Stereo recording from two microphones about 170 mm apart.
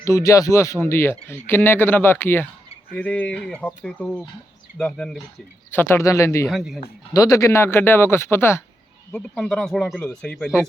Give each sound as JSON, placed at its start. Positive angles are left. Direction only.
{"t": 0.0, "sound": "speech", "side_deg": 20}
{"t": 6.5, "sound": "speech", "side_deg": 0}
{"t": 7.1, "sound": "speech", "side_deg": 20}
{"t": 9.1, "sound": "speech", "side_deg": 5}